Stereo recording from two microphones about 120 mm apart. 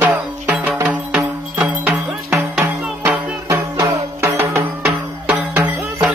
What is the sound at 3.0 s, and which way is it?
Music, 20° right (ahead or behind).